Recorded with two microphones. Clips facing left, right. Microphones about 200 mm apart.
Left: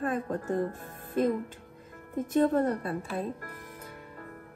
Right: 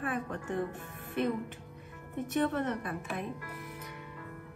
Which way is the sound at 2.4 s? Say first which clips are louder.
Left 7 dB; 35° left (ahead or behind).